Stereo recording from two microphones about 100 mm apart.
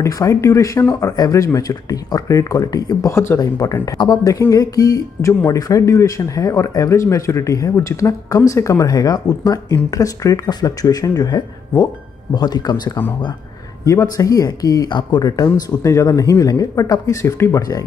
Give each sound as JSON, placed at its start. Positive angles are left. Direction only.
{"t": 0.0, "sound": "speech", "side_deg": 30}
{"t": 4.3, "sound": "speech", "side_deg": 35}
{"t": 13.8, "sound": "speech", "side_deg": 35}